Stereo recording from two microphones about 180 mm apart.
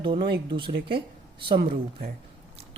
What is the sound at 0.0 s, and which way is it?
Speech, 25° right (ahead or behind).